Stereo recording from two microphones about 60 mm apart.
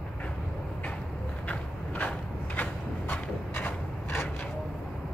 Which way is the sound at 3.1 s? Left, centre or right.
Left.